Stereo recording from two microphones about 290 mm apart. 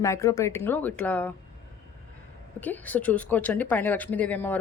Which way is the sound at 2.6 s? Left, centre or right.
Centre.